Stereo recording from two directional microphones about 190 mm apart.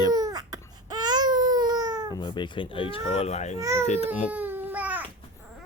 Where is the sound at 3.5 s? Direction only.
15° right (ahead or behind).